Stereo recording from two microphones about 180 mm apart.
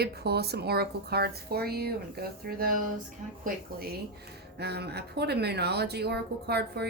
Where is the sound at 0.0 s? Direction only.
65° right (ahead or behind).